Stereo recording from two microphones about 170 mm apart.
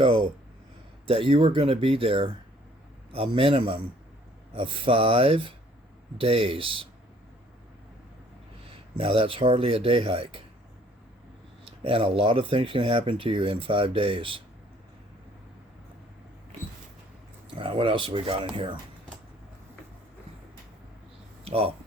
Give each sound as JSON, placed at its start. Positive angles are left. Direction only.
{"t": 1.0, "sound": "speech", "side_deg": -30}
{"t": 9.0, "sound": "speech", "side_deg": -35}
{"t": 11.8, "sound": "speech", "side_deg": -35}
{"t": 17.6, "sound": "speech", "side_deg": -30}
{"t": 21.4, "sound": "speech", "side_deg": -35}